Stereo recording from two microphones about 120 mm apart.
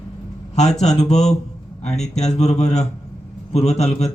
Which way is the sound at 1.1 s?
5° left (ahead or behind).